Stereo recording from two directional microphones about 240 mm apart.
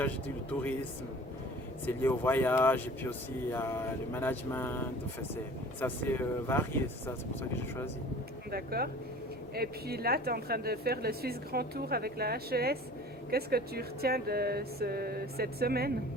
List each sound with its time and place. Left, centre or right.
1.9 s speech: centre
8.4 s speech: right